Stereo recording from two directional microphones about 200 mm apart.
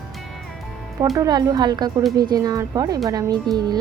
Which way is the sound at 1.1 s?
20° right (ahead or behind).